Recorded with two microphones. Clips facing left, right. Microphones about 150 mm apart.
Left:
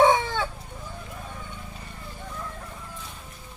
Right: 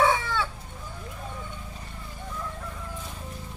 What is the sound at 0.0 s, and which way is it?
Chicken, 35° left (ahead or behind).